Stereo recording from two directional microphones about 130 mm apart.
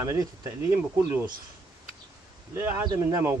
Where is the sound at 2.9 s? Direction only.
25° right (ahead or behind).